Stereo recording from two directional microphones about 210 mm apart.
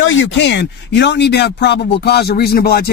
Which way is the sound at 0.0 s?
60° left (ahead or behind).